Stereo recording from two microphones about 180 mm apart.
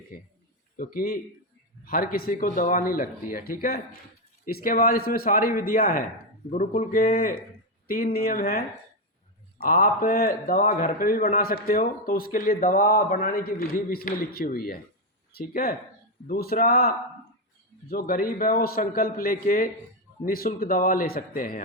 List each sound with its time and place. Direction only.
0.1 s a man's voice: 50° left (ahead or behind)